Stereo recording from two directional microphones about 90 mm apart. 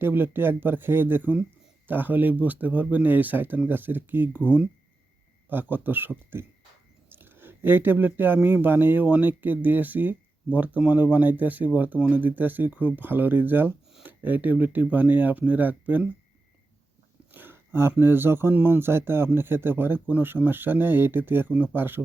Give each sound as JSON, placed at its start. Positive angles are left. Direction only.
{"t": 0.0, "sound": "speech", "side_deg": -25}
{"t": 17.3, "sound": "a sound", "side_deg": -25}
{"t": 18.0, "sound": "speech", "side_deg": -25}